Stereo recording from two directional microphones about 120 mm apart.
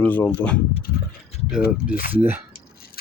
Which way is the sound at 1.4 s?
10° right (ahead or behind).